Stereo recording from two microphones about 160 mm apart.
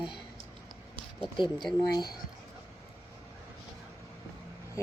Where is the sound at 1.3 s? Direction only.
30° left (ahead or behind).